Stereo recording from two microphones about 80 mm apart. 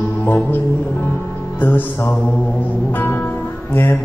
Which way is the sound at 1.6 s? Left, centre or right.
Left.